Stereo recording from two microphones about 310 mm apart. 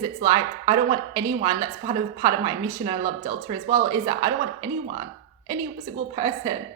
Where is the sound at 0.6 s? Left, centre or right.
Centre.